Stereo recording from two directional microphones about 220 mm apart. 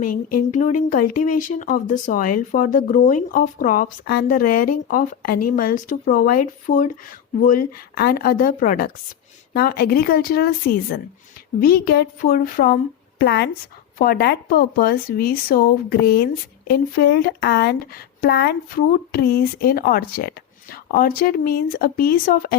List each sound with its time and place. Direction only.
0.0 s speech: 35° left (ahead or behind)